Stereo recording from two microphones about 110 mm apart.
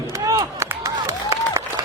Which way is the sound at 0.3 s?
30° right (ahead or behind).